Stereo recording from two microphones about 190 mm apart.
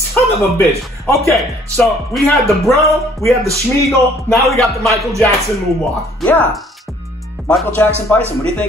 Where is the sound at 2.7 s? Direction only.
15° right (ahead or behind).